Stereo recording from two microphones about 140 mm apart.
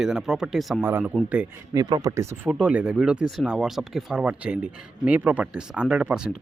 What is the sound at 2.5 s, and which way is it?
Speech, 10° right (ahead or behind).